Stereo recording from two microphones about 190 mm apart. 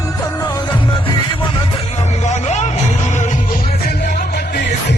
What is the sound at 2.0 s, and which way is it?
Music, 35° left (ahead or behind).